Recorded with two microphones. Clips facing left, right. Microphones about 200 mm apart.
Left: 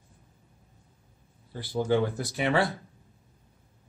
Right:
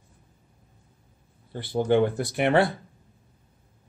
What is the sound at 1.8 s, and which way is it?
Speech, 60° right (ahead or behind).